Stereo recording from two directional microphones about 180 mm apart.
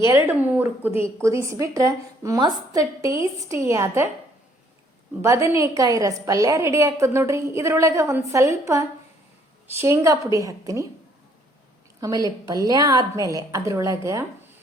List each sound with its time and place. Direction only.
0.0 s a woman's voice: 10° right (ahead or behind)
5.2 s a woman's voice: 15° right (ahead or behind)
11.9 s a woman's voice: 20° right (ahead or behind)